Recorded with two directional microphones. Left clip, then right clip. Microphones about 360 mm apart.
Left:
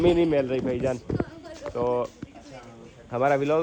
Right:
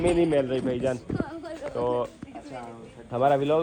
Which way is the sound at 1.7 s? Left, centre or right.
Centre.